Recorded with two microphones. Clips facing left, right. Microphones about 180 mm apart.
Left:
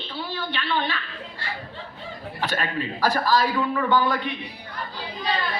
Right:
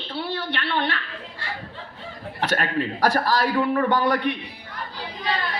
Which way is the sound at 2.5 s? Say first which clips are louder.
Right 5 dB; 65° right (ahead or behind).